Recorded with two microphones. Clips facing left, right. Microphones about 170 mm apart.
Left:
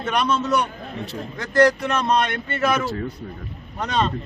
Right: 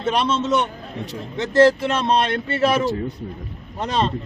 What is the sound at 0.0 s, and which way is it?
A man's voice, 30° right (ahead or behind).